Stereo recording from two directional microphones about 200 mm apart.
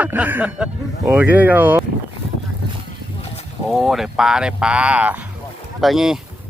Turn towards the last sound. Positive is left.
turn(degrees=0)  # may be behind; listen again after turning